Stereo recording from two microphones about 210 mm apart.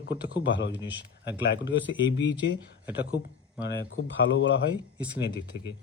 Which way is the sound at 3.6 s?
60° left (ahead or behind).